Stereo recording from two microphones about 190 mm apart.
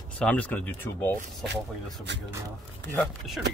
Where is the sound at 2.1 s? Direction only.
65° right (ahead or behind).